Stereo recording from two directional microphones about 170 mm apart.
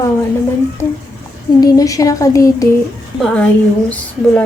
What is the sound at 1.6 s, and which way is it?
Speech, 20° left (ahead or behind).